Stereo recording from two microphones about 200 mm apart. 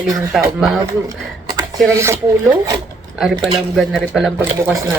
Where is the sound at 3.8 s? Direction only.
Centre (ahead or behind).